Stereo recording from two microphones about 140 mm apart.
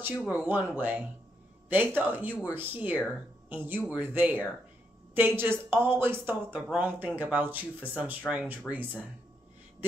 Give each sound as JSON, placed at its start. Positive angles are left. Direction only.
{"t": 0.2, "sound": "a woman's voice", "side_deg": -10}